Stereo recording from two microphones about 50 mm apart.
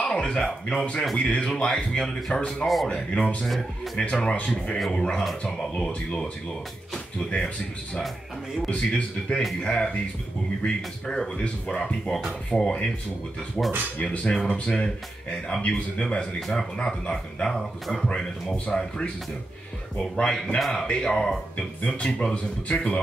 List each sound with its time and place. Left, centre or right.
0.0 s a sound: centre
0.7 s speech: left
2.9 s speech: left
3.4 s speech: centre
4.0 s speech: centre
11.1 s speech: centre
16.3 s speech: centre
16.7 s speech: centre
20.2 s speech: centre